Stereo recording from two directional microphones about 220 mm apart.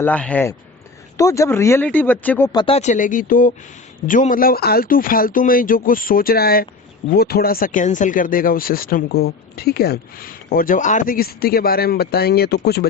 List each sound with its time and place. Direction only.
0.0 s speech: 5° left (ahead or behind); by 12.9 s 45° left (ahead or behind)